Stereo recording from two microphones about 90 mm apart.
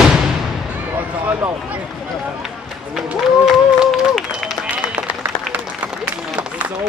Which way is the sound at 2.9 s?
5° right (ahead or behind).